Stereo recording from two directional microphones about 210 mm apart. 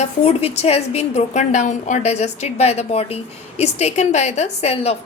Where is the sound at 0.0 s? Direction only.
30° left (ahead or behind).